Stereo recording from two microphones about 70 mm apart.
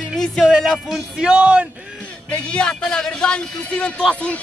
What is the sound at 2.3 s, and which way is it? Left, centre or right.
A man's voice, centre.